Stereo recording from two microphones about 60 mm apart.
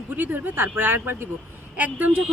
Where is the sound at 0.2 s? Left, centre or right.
Right.